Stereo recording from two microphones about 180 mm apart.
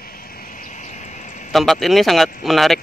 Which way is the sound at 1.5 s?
Centre (ahead or behind).